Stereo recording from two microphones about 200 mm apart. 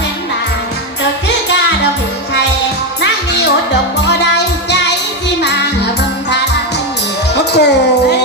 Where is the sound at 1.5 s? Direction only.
60° left (ahead or behind).